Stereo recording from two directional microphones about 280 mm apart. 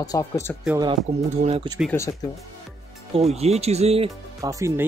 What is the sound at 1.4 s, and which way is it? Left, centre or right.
Speech, centre.